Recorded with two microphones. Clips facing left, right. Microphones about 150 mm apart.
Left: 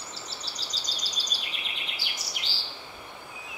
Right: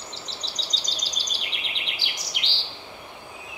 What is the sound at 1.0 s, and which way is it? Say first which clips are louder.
Bird vocalization: right 2 dB; 90° right.